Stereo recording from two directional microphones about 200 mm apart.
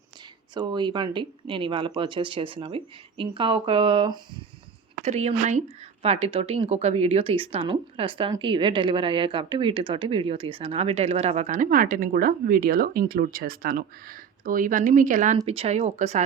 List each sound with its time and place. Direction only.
0.5 s speech: 20° right (ahead or behind)